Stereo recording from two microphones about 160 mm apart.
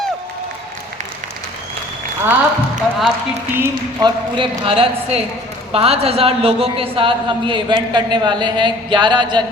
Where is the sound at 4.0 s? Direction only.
30° right (ahead or behind).